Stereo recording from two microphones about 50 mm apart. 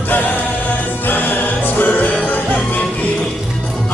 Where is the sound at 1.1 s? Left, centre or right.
Left.